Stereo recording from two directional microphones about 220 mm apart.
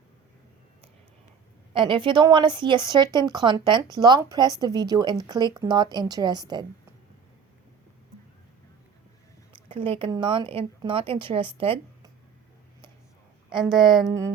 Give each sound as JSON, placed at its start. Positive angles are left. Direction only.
{"t": 1.7, "sound": "speech", "side_deg": -20}
{"t": 9.6, "sound": "speech", "side_deg": -25}
{"t": 13.7, "sound": "speech", "side_deg": 0}